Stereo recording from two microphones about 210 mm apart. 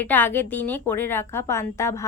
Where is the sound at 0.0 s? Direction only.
10° left (ahead or behind).